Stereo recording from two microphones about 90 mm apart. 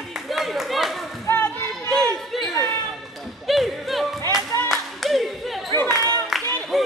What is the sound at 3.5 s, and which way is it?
Music, centre (ahead or behind).